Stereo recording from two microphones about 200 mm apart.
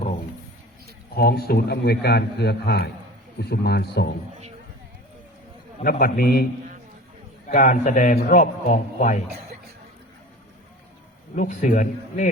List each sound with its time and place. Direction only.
1.1 s a man's voice: 50° left (ahead or behind)
5.8 s a man's voice: 45° left (ahead or behind)
7.4 s a man's voice: 40° left (ahead or behind)
11.3 s a man's voice: 40° left (ahead or behind)